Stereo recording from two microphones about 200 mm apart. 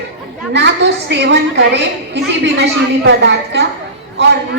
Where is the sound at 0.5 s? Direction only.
60° right (ahead or behind).